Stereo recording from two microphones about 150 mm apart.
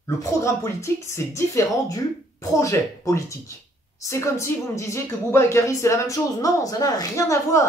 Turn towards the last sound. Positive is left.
turn(degrees=20)  # may be behind; listen again after turning